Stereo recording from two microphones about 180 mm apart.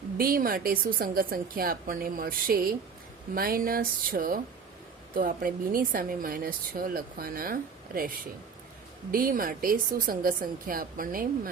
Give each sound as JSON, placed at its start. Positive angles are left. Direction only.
{"t": 0.2, "sound": "speech", "side_deg": -55}
{"t": 9.1, "sound": "speech", "side_deg": -50}